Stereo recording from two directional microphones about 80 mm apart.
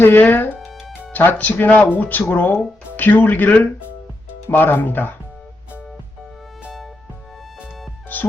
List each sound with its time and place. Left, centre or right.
0.0 s speech: left
0.8 s music: centre
1.1 s speech: left